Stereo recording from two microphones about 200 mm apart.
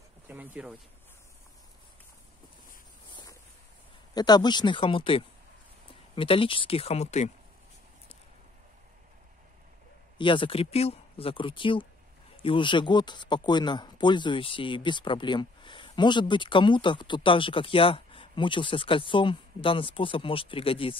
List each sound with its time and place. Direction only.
0.3 s speech: 10° right (ahead or behind)
3.1 s a sound: 20° left (ahead or behind)
4.1 s speech: 20° left (ahead or behind)
10.1 s speech: 25° left (ahead or behind)